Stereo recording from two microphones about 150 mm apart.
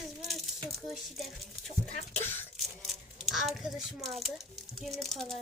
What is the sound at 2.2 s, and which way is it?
Speech, 15° left (ahead or behind).